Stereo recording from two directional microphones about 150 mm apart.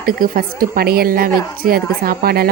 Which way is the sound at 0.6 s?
85° right.